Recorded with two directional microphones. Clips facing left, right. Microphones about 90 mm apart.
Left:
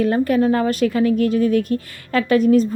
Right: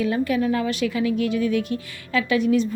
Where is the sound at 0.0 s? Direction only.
45° left (ahead or behind).